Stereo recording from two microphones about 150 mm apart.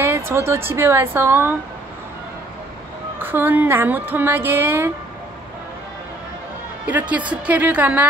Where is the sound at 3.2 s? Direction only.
15° right (ahead or behind).